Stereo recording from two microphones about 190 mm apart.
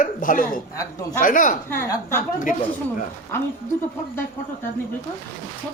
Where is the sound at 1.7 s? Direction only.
10° left (ahead or behind).